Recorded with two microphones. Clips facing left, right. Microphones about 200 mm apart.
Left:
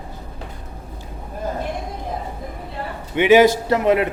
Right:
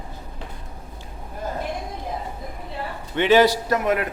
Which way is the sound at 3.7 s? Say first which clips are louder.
Left 5 dB; 25° left (ahead or behind).